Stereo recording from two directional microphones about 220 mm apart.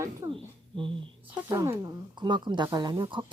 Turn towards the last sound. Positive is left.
turn(degrees=-20)  # may be behind; listen again after turning